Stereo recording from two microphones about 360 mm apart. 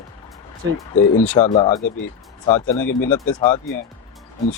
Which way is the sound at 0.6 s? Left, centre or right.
Right.